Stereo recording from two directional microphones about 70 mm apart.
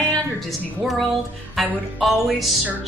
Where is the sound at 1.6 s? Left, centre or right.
Centre.